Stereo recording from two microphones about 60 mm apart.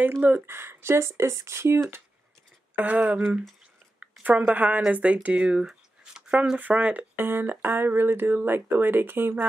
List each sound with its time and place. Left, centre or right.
0.5 s speech: right
2.7 s speech: right
7.2 s speech: right